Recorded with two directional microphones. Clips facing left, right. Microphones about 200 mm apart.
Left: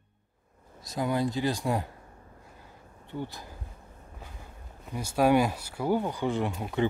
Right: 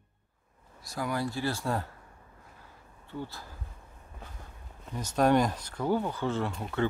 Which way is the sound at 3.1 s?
15° left (ahead or behind).